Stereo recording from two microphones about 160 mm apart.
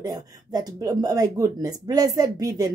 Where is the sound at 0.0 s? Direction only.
25° right (ahead or behind).